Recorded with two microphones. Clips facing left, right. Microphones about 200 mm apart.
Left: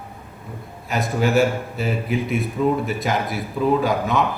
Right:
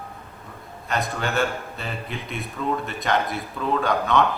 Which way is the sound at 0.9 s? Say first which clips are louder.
Left 6 dB; centre (ahead or behind).